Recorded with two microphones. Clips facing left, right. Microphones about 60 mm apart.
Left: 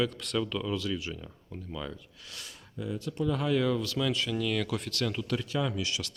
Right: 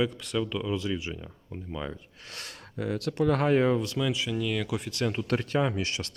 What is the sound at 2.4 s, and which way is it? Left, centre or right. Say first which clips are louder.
Speech: right 5 dB; right.